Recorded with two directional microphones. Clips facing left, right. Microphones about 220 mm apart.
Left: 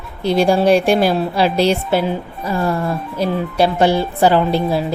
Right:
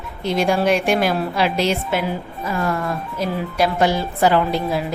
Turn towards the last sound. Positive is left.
turn(degrees=30)  # may be behind; listen again after turning